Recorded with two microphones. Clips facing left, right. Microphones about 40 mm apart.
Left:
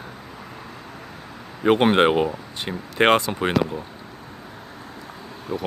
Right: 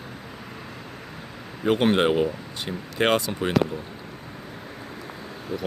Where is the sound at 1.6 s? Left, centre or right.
Left.